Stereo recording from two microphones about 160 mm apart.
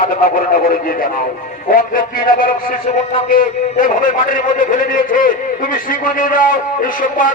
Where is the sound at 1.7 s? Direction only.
60° left (ahead or behind).